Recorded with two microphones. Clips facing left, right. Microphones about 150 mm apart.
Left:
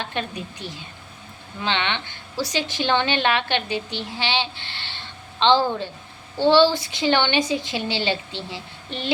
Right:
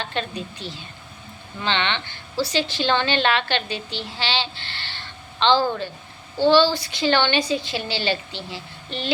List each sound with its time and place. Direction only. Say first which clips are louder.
0.0 s a woman's voice: right 1 dB; 15° left (ahead or behind)